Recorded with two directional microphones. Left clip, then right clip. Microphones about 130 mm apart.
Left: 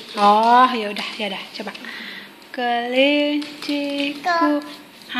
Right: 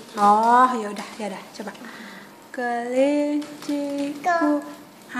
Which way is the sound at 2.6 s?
20° left (ahead or behind).